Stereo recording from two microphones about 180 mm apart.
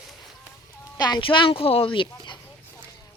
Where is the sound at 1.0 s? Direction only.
25° left (ahead or behind).